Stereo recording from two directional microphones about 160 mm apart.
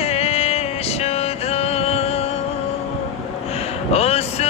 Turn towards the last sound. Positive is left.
turn(degrees=40)  # may be behind; listen again after turning